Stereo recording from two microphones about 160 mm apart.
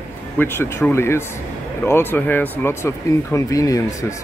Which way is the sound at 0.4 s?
15° left (ahead or behind).